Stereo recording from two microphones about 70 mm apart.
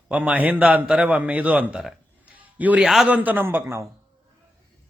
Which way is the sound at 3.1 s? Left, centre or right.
Right.